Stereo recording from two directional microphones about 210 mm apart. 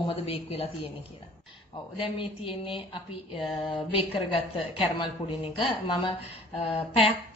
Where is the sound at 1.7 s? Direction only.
25° left (ahead or behind).